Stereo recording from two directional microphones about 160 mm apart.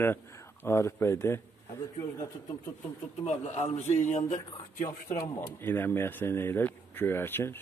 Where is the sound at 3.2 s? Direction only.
40° left (ahead or behind).